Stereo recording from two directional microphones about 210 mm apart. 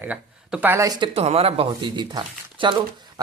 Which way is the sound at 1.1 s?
30° right (ahead or behind).